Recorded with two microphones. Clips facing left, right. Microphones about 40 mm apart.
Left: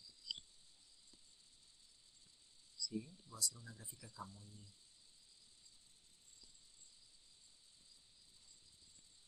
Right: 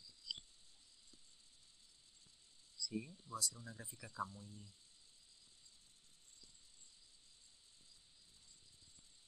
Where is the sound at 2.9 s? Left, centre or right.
Right.